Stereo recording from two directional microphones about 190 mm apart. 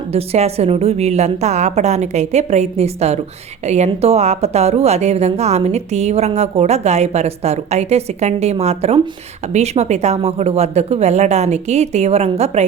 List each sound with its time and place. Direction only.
0.1 s a woman's voice: 30° right (ahead or behind)